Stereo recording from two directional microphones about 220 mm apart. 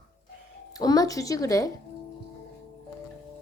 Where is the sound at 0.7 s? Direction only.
15° left (ahead or behind).